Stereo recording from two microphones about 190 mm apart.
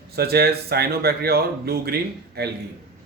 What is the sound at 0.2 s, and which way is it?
Speech, 55° right (ahead or behind).